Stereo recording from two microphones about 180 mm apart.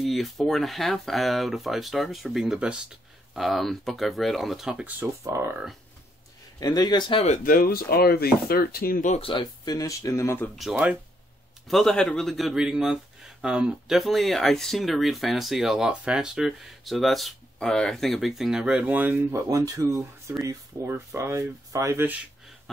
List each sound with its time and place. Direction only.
0.0 s speech: centre (ahead or behind)
6.6 s speech: 20° left (ahead or behind)
7.2 s speech: 50° left (ahead or behind)
9.2 s speech: 25° left (ahead or behind)
10.5 s speech: centre (ahead or behind)